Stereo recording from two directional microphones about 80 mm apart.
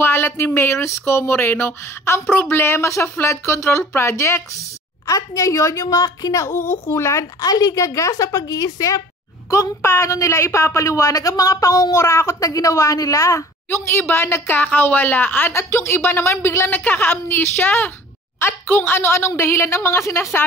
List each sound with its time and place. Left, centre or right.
0.0 s a sound: left
0.6 s a woman's voice: left
9.5 s a woman's voice: left